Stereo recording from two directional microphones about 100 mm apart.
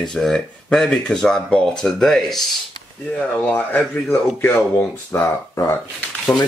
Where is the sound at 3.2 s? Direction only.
15° left (ahead or behind).